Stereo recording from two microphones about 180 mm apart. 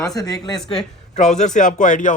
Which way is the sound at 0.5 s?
5° left (ahead or behind).